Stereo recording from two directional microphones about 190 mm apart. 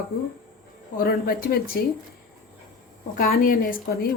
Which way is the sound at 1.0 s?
50° left (ahead or behind).